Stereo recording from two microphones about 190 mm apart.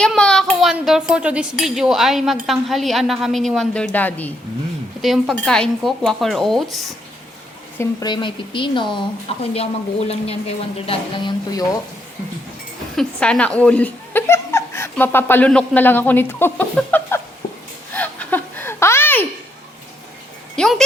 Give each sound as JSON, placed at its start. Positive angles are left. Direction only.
{"t": 0.0, "sound": "a child's voice", "side_deg": 5}
{"t": 5.0, "sound": "a child's voice", "side_deg": 0}
{"t": 7.8, "sound": "speech", "side_deg": 25}
{"t": 13.0, "sound": "speech", "side_deg": 5}
{"t": 17.9, "sound": "a sound", "side_deg": 10}
{"t": 20.6, "sound": "speech", "side_deg": 5}